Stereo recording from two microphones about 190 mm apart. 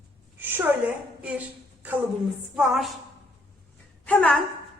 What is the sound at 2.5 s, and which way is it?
Speech, centre (ahead or behind).